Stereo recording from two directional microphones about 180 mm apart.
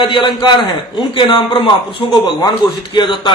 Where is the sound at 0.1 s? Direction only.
25° left (ahead or behind).